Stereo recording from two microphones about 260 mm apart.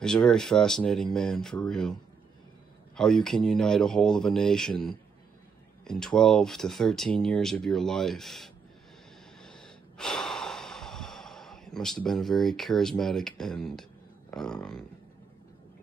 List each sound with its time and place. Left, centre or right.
0.0 s speech: centre
3.0 s speech: centre
9.4 s gasp: centre
13.4 s speech: centre